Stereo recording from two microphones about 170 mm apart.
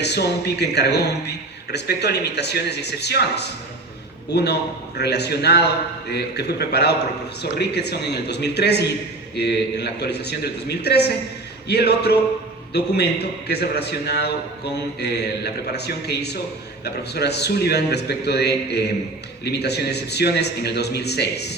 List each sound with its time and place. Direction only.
0.0 s a man's voice: 75° left (ahead or behind)